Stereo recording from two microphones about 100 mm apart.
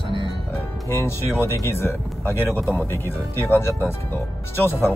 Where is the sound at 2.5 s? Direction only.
25° right (ahead or behind).